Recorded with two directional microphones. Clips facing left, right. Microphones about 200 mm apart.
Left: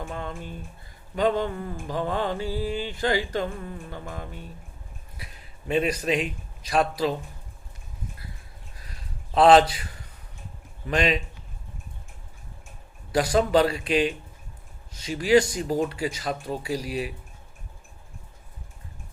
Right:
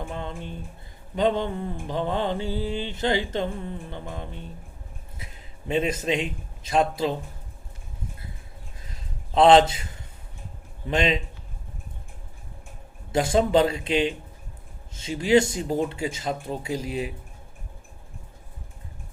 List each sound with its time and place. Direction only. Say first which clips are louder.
0.0 s mantra: right 1 dB; 25° right (ahead or behind)
5.1 s a man's voice: even; 25° right (ahead or behind)
9.3 s mantra: even; 25° right (ahead or behind)
13.1 s mantra: even; 25° right (ahead or behind)